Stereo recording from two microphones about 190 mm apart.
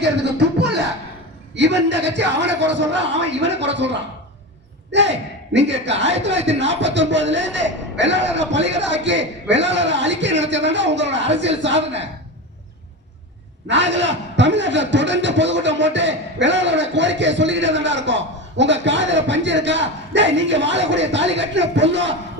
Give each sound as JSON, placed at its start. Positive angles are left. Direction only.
{"t": 0.0, "sound": "music", "side_deg": -65}
{"t": 1.5, "sound": "a man's voice", "side_deg": -70}
{"t": 13.7, "sound": "a man's voice", "side_deg": -70}